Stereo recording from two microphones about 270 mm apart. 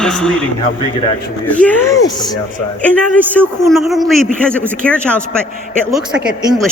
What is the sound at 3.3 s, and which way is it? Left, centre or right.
Speech, centre.